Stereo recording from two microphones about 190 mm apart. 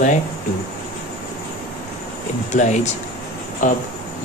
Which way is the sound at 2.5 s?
40° left (ahead or behind).